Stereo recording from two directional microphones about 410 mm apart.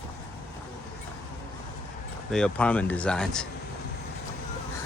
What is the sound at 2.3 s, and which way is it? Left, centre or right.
Speech, centre.